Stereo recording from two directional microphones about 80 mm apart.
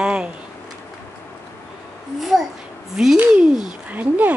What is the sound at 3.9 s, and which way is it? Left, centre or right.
Speech, centre.